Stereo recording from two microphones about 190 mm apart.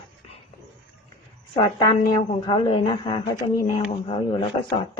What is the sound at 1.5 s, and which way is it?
A woman's voice, 25° left (ahead or behind).